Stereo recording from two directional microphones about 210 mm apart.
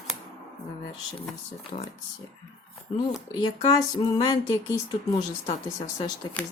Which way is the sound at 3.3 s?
20° left (ahead or behind).